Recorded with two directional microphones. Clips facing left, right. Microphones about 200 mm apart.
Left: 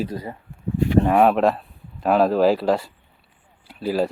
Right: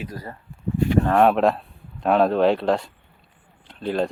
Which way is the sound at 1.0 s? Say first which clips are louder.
Even; 5° left (ahead or behind).